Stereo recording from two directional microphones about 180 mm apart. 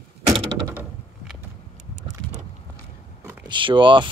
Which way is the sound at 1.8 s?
40° right (ahead or behind).